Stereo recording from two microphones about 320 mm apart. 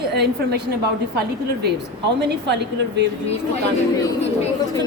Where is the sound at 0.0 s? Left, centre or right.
Right.